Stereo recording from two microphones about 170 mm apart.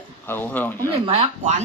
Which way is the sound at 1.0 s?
35° right (ahead or behind).